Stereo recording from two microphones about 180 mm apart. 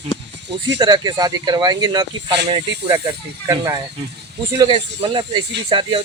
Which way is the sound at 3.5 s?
20° right (ahead or behind).